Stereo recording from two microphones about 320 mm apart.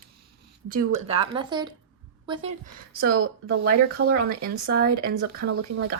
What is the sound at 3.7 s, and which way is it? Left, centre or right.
Speech, right.